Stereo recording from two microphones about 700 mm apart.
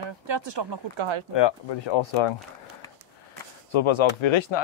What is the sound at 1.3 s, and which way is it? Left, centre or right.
Speech, left.